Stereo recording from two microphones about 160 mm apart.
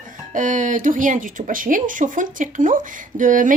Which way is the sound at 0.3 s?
55° right (ahead or behind).